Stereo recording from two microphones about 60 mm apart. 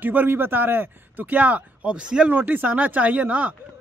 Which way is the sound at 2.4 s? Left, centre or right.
Right.